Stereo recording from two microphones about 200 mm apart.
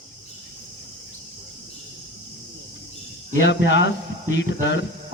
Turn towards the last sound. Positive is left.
turn(degrees=60)  # may be behind; listen again after turning